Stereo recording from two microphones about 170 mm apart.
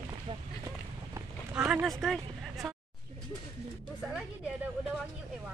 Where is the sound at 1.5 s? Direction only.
5° right (ahead or behind).